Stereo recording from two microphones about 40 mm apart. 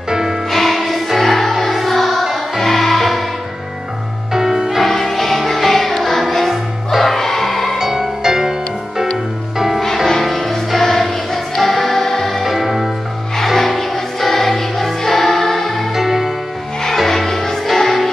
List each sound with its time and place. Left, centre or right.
0.1 s music: centre
0.5 s music: centre
4.3 s music: centre
4.8 s music: centre
7.2 s music: centre
7.8 s music: centre
10.2 s music: centre
12.4 s music: centre
15.9 s music: centre
16.8 s music: centre